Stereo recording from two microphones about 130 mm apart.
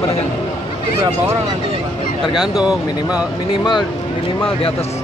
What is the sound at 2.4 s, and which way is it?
Speech, 5° right (ahead or behind).